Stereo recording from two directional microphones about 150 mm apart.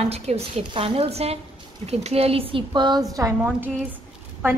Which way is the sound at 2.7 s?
30° right (ahead or behind).